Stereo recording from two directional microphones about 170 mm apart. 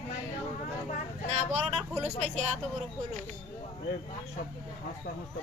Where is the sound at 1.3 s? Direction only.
40° right (ahead or behind).